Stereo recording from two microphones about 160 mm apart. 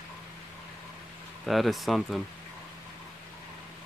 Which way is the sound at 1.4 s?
Centre (ahead or behind).